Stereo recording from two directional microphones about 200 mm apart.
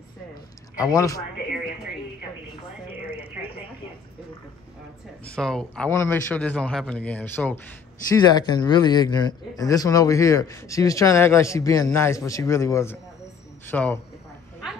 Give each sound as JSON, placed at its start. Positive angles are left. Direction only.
{"t": 0.7, "sound": "a man's voice", "side_deg": 15}
{"t": 3.1, "sound": "a sound", "side_deg": 25}
{"t": 5.2, "sound": "a man's voice", "side_deg": 5}
{"t": 8.2, "sound": "a man's voice", "side_deg": 20}